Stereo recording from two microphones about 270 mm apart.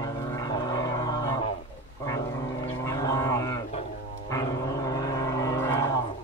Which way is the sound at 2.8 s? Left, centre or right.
Centre.